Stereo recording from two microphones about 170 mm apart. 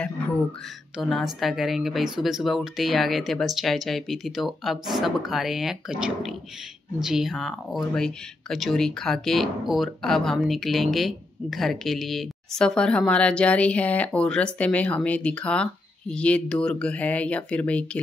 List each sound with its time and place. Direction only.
0.9 s speech: centre (ahead or behind)